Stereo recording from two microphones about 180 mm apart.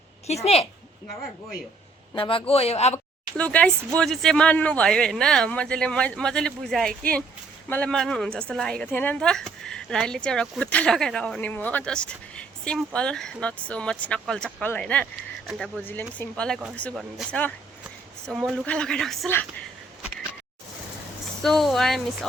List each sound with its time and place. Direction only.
0.3 s speech: 35° left (ahead or behind)
2.1 s a man's voice: 30° left (ahead or behind)
3.3 s a woman's voice: 5° left (ahead or behind)
21.4 s a woman's voice: centre (ahead or behind)